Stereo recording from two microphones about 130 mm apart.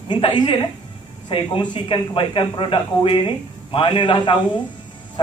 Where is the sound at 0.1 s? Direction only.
35° left (ahead or behind).